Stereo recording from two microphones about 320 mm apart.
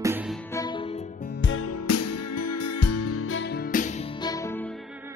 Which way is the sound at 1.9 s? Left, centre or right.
Left.